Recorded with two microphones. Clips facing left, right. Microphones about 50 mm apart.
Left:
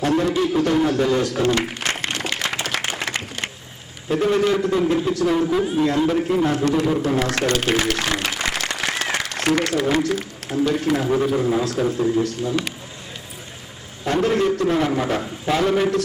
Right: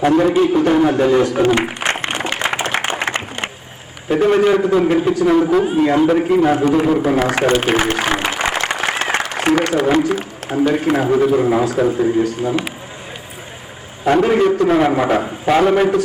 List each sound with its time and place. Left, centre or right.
0.0 s a man's voice: right
0.3 s a sound: right
4.1 s a man's voice: right
6.5 s a man's voice: centre
7.1 s applause: centre
9.3 s a man's voice: centre
11.9 s speech: centre
14.0 s a man's voice: right
14.8 s a man's voice: right